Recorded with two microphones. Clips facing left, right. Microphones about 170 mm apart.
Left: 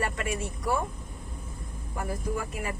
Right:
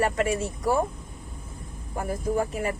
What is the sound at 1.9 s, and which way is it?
Speech, 35° right (ahead or behind).